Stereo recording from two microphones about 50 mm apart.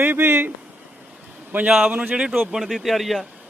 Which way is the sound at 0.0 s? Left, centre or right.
Right.